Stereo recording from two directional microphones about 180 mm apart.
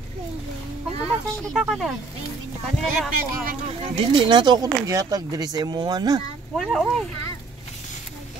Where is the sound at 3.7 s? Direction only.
25° right (ahead or behind).